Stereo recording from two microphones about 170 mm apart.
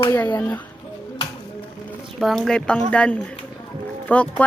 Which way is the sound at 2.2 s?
Centre (ahead or behind).